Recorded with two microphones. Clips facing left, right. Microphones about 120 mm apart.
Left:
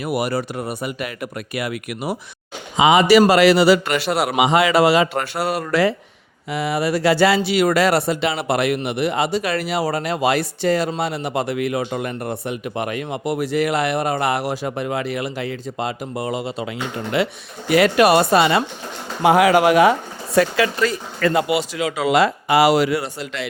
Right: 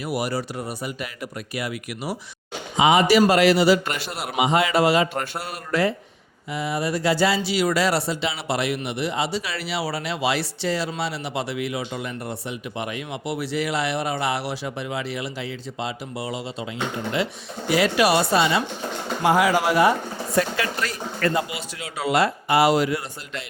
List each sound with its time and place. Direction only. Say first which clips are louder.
0.0 s speech: left 4 dB; 60° left (ahead or behind)
2.7 s a man's voice: left 4 dB; 90° left
6.5 s speech: left 5 dB; 75° left (ahead or behind); by 16.6 s 55° left (ahead or behind)
17.2 s speech: left 4 dB; 65° left (ahead or behind); by 20.7 s 90° left
21.3 s speech: left 8 dB; 75° left (ahead or behind)